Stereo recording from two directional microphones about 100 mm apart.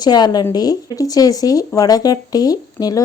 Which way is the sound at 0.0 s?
40° left (ahead or behind).